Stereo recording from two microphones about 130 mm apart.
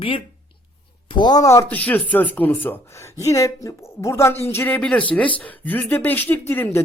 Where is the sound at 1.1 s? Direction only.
30° left (ahead or behind).